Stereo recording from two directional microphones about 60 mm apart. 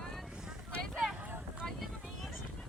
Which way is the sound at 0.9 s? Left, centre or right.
Centre.